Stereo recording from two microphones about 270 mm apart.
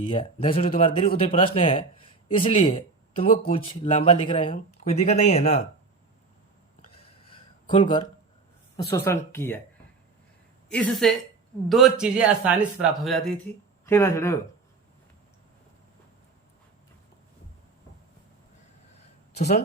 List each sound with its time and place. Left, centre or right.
0.0 s speech: left
6.9 s a sound: centre
8.7 s speech: centre
10.7 s speech: centre
19.3 s speech: left